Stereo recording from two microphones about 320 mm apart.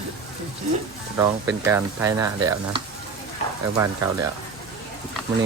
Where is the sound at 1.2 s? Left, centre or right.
Centre.